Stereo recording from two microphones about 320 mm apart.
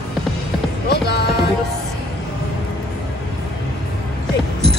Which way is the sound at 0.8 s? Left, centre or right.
Left.